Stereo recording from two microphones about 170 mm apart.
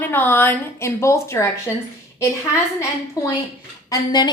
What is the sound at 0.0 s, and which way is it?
A woman's voice, 10° left (ahead or behind).